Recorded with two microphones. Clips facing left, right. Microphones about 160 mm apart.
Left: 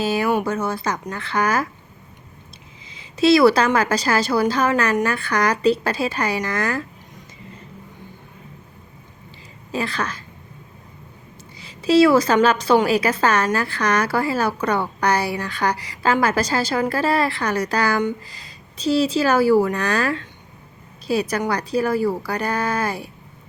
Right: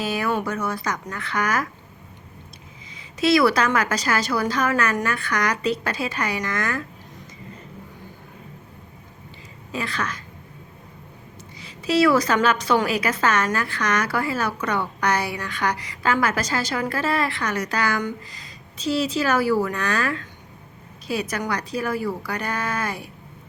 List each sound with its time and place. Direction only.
0.0 s a woman's voice: 30° left (ahead or behind)
2.9 s a woman's voice: 30° left (ahead or behind)
9.7 s a woman's voice: 30° left (ahead or behind)
11.6 s a woman's voice: 30° left (ahead or behind)